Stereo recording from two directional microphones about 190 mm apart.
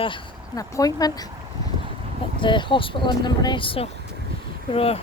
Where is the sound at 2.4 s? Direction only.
25° left (ahead or behind).